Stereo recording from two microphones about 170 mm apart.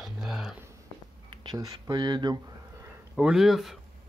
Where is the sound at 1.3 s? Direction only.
25° right (ahead or behind).